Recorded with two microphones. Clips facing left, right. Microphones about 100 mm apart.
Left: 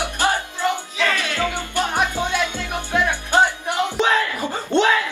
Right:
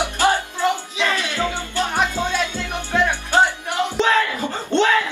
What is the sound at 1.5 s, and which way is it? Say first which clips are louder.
Music: even; 15° left (ahead or behind).